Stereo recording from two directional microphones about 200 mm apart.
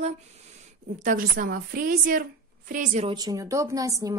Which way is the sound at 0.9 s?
40° right (ahead or behind).